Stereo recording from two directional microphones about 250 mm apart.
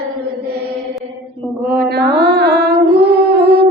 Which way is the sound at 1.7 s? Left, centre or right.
Right.